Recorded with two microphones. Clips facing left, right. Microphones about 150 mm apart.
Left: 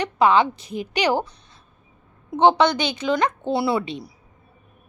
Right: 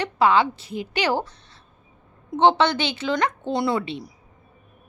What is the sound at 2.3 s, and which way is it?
A woman's voice, 15° left (ahead or behind).